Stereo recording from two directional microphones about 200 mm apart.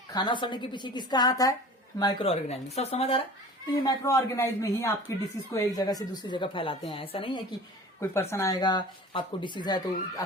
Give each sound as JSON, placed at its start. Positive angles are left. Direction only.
{"t": 0.1, "sound": "speech", "side_deg": 20}
{"t": 3.8, "sound": "speech", "side_deg": 15}
{"t": 8.1, "sound": "speech", "side_deg": 10}